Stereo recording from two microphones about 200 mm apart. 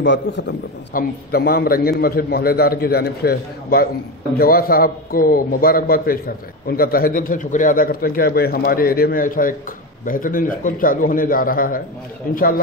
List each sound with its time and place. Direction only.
0.0 s a man's voice: 60° left (ahead or behind)
0.9 s a man's voice: 50° left (ahead or behind)